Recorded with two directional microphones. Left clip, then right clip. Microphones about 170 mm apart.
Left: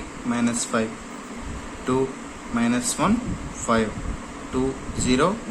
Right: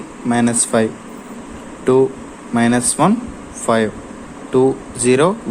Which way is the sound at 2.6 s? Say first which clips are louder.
Right 9 dB; 40° right (ahead or behind).